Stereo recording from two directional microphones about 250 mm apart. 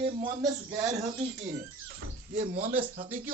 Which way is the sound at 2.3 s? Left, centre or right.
Right.